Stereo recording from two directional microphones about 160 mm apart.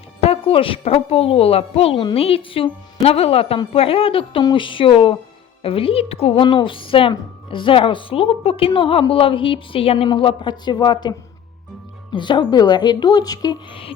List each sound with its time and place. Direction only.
0.2 s a woman's voice: 35° left (ahead or behind)
12.1 s a woman's voice: 30° left (ahead or behind)